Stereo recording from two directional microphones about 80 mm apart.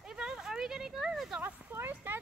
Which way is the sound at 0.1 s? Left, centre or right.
Centre.